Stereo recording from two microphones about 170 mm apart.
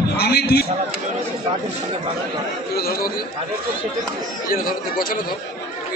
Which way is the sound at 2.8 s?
60° left (ahead or behind).